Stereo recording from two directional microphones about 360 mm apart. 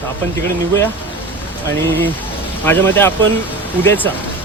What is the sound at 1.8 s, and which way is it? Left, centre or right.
Speech, centre.